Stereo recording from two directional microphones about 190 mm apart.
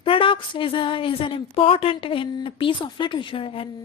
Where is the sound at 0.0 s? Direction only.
30° left (ahead or behind).